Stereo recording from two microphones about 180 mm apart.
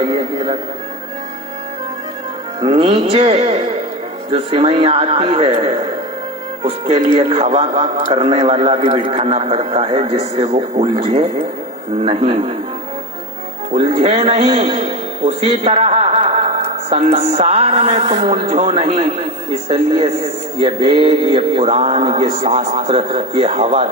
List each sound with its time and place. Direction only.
0.0 s speech: 30° right (ahead or behind)
2.6 s a man's voice: 30° right (ahead or behind)
13.7 s a man's voice: 35° right (ahead or behind)